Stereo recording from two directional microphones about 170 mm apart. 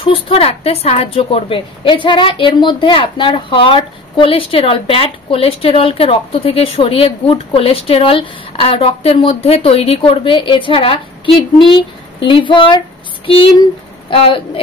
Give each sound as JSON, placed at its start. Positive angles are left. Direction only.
{"t": 0.0, "sound": "speech", "side_deg": 30}